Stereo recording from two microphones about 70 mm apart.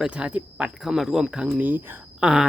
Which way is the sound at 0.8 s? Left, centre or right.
Centre.